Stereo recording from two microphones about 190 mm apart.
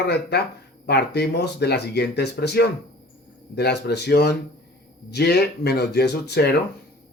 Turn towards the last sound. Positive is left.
turn(degrees=60)  # may be behind; listen again after turning